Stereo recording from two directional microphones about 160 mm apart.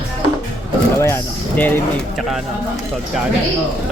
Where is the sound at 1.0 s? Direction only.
10° left (ahead or behind).